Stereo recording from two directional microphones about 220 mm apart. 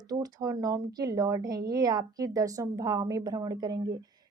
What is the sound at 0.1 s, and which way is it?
Speech, 15° right (ahead or behind).